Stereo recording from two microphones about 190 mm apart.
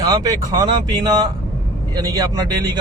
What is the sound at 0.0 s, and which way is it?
Speech, 20° right (ahead or behind).